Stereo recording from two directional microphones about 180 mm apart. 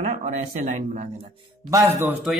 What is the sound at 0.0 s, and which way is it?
Speech, 40° right (ahead or behind).